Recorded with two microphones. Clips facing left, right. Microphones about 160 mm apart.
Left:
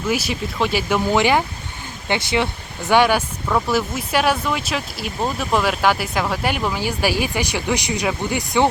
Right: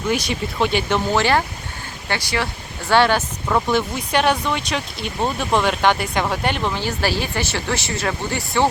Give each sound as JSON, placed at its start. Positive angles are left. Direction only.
{"t": 0.1, "sound": "speech", "side_deg": 5}